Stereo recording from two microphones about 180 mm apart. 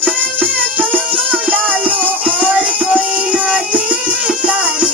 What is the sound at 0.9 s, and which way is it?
Music, 10° right (ahead or behind).